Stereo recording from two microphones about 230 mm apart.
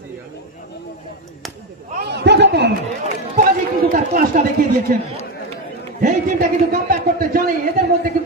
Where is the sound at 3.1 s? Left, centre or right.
Right.